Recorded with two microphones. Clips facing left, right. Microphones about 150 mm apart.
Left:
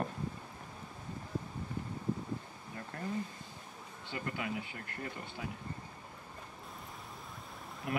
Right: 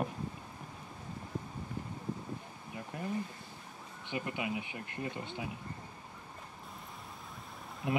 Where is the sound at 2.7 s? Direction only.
15° right (ahead or behind).